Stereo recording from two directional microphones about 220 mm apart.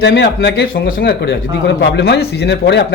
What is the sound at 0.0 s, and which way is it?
Speech, 50° left (ahead or behind).